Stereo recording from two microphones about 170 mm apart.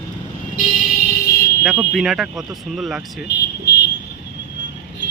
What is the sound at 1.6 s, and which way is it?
Speech, centre (ahead or behind).